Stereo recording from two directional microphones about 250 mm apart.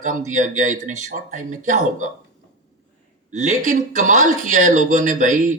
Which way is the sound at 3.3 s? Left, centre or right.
Right.